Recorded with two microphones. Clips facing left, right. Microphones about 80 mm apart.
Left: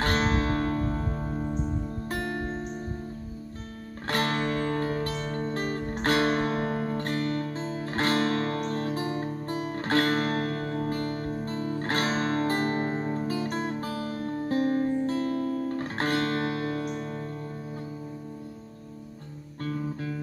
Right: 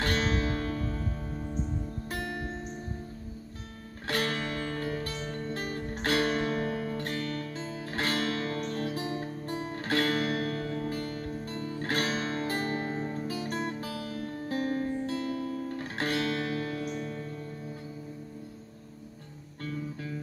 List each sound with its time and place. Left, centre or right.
0.0 s music: left
4.1 s music: left
9.8 s music: left
19.6 s music: left